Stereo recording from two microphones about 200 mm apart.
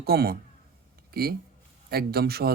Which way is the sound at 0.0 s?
50° right (ahead or behind).